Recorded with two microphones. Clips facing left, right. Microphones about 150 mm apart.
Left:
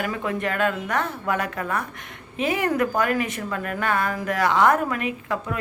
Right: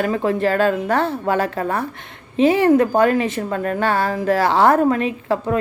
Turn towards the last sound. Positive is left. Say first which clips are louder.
# right 7 dB
turn(degrees=-30)  # may be behind; listen again after turning